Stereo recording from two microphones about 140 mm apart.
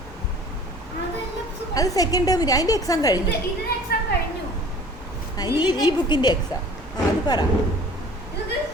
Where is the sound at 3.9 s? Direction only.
90° left.